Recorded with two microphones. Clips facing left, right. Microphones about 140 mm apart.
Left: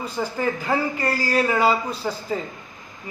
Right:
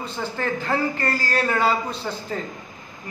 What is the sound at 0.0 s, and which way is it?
A man's voice, 10° left (ahead or behind).